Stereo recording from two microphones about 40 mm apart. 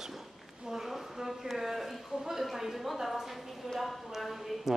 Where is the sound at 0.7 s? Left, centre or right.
Centre.